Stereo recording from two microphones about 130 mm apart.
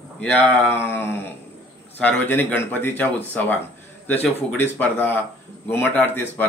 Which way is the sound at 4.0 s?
15° left (ahead or behind).